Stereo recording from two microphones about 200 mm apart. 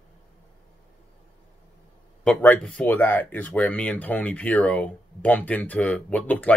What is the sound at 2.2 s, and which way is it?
Speech, 5° left (ahead or behind).